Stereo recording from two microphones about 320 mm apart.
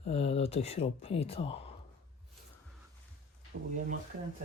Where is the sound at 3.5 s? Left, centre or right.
Right.